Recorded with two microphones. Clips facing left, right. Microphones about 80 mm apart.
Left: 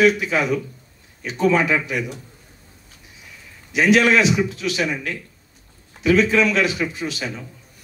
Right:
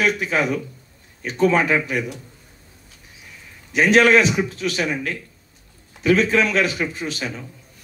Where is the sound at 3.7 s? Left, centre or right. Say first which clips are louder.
Right 1 dB; right.